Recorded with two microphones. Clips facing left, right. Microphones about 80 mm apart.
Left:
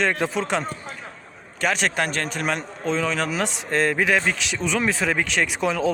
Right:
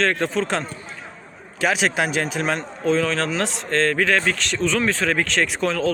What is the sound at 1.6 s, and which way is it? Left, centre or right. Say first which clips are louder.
Speech: right 2 dB; centre.